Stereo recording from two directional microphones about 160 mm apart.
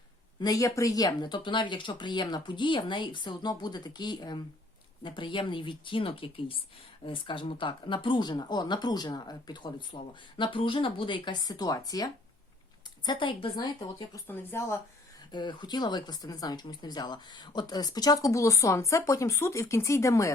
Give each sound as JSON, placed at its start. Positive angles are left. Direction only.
{"t": 0.3, "sound": "speech", "side_deg": 25}
{"t": 14.3, "sound": "speech", "side_deg": 15}
{"t": 15.3, "sound": "speech", "side_deg": 30}